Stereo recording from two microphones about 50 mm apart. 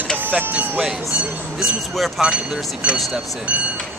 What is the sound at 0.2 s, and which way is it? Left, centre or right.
Speech, right.